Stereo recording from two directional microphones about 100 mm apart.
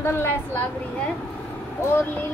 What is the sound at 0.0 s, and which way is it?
Speech, 20° left (ahead or behind).